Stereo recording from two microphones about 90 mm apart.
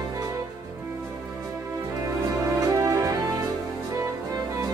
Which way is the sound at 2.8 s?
35° right (ahead or behind).